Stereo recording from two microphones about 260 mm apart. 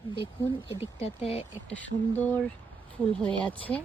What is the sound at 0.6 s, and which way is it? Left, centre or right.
Speech, left.